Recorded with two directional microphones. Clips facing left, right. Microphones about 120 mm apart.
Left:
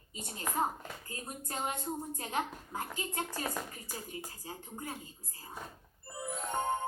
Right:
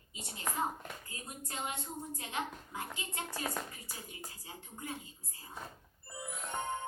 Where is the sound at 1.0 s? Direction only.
40° left (ahead or behind).